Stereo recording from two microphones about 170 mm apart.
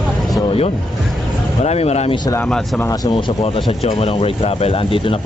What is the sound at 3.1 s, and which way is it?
Speech, 30° left (ahead or behind).